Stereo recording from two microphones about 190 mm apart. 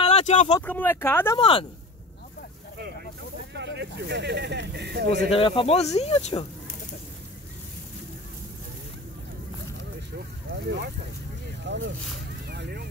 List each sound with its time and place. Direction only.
0.0 s a sound: 35° left (ahead or behind)
0.7 s speech: 10° left (ahead or behind)
1.4 s speech: 25° left (ahead or behind)
3.5 s speech: 65° right (ahead or behind)
5.3 s speech: 30° left (ahead or behind)
10.1 s speech: 60° right (ahead or behind)
12.4 s vehicle: 55° right (ahead or behind)